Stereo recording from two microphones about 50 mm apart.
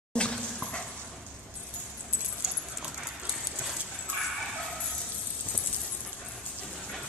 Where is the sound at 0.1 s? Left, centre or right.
Centre.